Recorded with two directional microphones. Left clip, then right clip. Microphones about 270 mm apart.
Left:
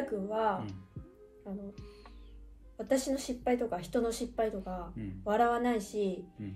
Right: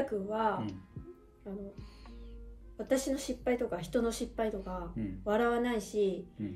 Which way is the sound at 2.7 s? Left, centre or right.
Centre.